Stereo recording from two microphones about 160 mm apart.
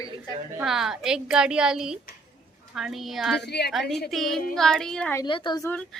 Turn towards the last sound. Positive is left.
turn(degrees=25)  # may be behind; listen again after turning